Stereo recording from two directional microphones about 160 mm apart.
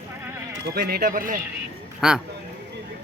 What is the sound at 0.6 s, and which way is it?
Speech, 75° right (ahead or behind).